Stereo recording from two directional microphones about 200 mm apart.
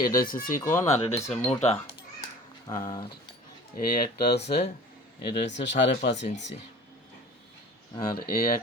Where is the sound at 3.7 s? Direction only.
50° left (ahead or behind).